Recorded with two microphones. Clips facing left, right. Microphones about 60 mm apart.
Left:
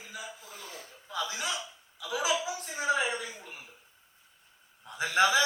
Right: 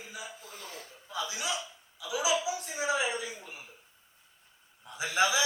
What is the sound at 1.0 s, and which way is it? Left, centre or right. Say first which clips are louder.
A man's voice: left 1 dB; left.